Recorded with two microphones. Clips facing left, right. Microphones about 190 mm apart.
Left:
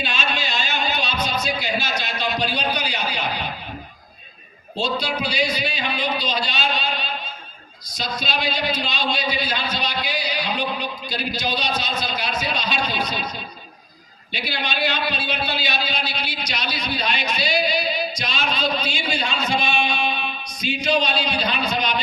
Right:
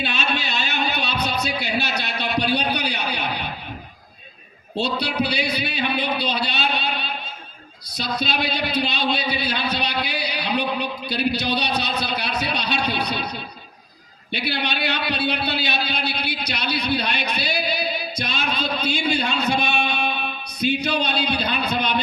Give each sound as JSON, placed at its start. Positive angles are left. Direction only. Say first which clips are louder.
{"t": 0.0, "sound": "music", "louder": "right 1 dB", "side_deg": -60}
{"t": 4.8, "sound": "a man's voice", "louder": "right 1 dB", "side_deg": -65}
{"t": 14.3, "sound": "a man's voice", "louder": "right 1 dB", "side_deg": -65}